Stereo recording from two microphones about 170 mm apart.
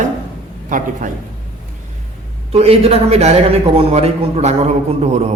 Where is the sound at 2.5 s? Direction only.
35° right (ahead or behind).